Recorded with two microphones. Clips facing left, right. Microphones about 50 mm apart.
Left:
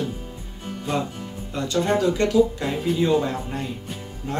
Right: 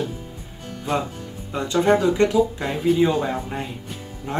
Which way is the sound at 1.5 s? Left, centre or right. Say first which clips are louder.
Right 4 dB; centre.